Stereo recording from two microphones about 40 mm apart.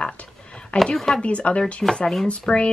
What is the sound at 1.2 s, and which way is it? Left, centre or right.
Speech, left.